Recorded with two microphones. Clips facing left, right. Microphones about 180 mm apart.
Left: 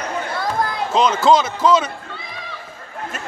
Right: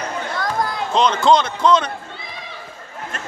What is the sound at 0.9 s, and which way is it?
Speech, 5° left (ahead or behind).